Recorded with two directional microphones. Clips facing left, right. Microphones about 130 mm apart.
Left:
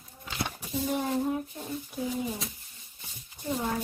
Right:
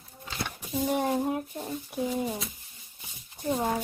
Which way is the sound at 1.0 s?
15° right (ahead or behind).